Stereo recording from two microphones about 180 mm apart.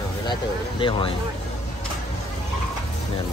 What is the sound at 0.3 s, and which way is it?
Speech, 30° left (ahead or behind).